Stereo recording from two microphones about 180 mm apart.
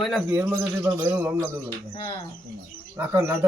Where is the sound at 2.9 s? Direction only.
15° right (ahead or behind).